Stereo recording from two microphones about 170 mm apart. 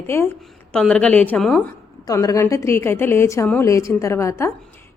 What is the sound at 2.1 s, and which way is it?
A woman's voice, 20° left (ahead or behind).